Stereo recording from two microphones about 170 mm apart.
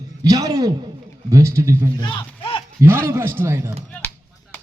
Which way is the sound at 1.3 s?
15° right (ahead or behind).